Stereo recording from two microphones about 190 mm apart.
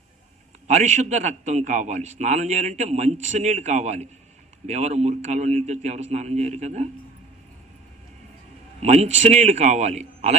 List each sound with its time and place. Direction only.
0.7 s a man's voice: 40° right (ahead or behind)
8.8 s a man's voice: 35° right (ahead or behind)